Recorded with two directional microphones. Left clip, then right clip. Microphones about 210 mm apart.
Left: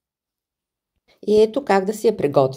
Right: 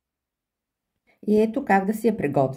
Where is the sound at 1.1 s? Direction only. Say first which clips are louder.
Left 6 dB; 15° left (ahead or behind).